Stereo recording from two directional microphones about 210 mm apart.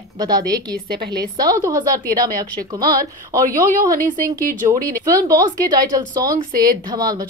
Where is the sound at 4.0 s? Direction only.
40° right (ahead or behind).